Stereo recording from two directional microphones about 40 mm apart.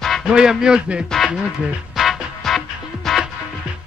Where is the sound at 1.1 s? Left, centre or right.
Centre.